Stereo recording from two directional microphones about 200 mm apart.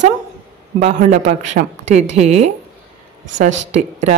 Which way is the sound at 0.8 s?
35° right (ahead or behind).